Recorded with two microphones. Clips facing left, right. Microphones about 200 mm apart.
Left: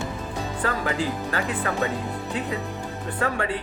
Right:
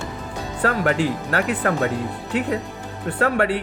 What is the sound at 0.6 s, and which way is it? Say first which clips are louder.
Speech: right 7 dB; 70° right (ahead or behind).